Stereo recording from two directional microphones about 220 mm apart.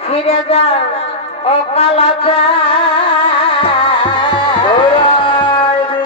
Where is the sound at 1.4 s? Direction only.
25° left (ahead or behind).